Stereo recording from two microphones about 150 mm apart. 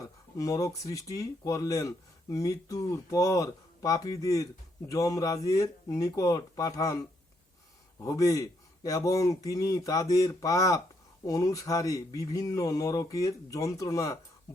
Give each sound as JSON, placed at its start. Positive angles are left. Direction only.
{"t": 0.0, "sound": "speech", "side_deg": 25}
{"t": 8.0, "sound": "speech", "side_deg": 20}